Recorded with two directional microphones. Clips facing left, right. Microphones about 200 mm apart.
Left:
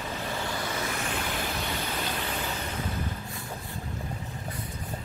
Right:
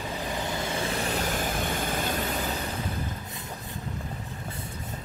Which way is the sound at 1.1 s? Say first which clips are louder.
Right 3 dB; 45° right (ahead or behind).